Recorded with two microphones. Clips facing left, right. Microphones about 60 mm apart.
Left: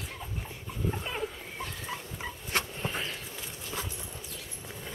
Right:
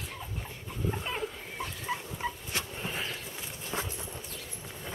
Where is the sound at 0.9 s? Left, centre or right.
Centre.